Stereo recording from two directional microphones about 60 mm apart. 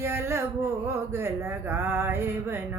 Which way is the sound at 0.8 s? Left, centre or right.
Right.